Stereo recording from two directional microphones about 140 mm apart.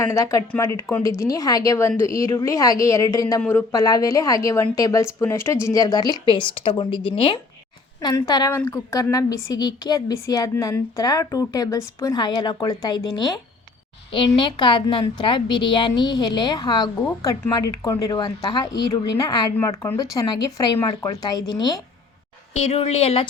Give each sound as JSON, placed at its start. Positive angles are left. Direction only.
{"t": 0.0, "sound": "a woman's voice", "side_deg": 20}
{"t": 22.6, "sound": "speech", "side_deg": 45}